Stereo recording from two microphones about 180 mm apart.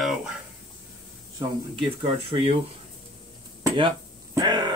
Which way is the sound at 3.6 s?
25° right (ahead or behind).